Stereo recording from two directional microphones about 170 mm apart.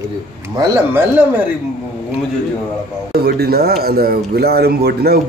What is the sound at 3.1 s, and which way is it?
Speech, 70° right (ahead or behind).